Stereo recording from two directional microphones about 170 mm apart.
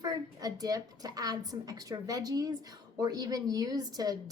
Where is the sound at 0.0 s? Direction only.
20° right (ahead or behind).